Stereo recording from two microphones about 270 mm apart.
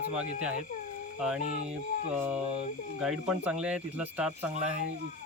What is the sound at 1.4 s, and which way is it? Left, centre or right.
Speech, right.